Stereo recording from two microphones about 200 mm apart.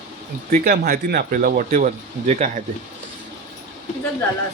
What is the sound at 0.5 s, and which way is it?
Speech, 50° right (ahead or behind).